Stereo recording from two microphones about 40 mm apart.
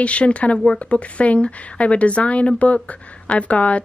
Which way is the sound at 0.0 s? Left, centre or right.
Left.